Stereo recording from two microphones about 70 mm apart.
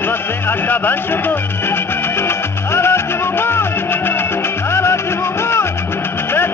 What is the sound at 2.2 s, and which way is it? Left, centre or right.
Music, left.